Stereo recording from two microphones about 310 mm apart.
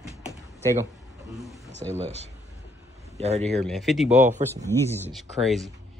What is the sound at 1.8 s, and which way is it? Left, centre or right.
Speech, centre.